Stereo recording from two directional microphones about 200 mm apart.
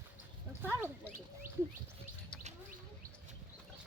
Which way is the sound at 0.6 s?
10° right (ahead or behind).